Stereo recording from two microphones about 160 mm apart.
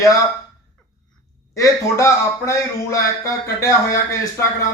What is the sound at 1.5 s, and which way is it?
A man's voice, 20° left (ahead or behind).